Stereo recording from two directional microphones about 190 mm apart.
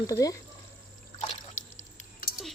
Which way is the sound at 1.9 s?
50° left (ahead or behind).